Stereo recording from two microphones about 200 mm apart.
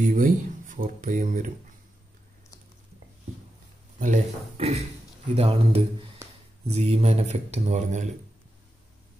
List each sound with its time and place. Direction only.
0.0 s speech: 40° right (ahead or behind)
4.0 s speech: 35° right (ahead or behind)